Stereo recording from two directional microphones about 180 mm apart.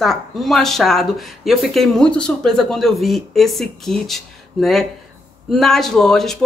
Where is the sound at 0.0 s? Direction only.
Centre (ahead or behind).